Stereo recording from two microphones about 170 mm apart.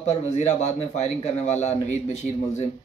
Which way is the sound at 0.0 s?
45° left (ahead or behind).